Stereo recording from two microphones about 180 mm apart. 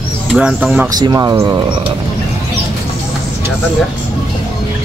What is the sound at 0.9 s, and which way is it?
Speech, 20° right (ahead or behind).